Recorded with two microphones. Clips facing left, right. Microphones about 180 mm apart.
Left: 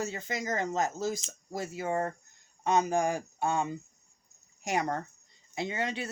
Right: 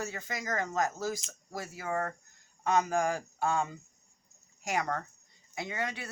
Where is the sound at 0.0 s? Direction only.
25° left (ahead or behind).